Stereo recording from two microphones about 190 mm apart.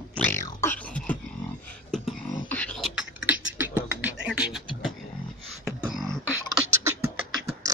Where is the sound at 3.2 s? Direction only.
10° right (ahead or behind).